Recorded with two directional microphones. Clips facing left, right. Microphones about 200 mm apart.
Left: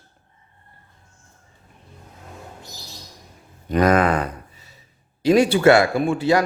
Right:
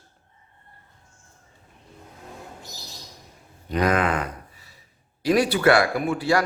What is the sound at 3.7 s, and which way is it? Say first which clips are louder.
Speech: left 5 dB; 45° left (ahead or behind).